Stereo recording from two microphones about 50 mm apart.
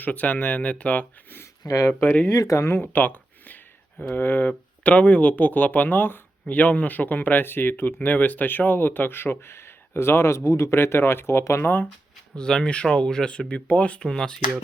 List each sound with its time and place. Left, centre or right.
0.0 s speech: left
2.5 s speech: left
2.9 s a sound: left
4.1 s speech: left
4.4 s speech: left
10.8 s speech: left
11.6 s speech: left
12.4 s speech: centre
14.0 s speech: centre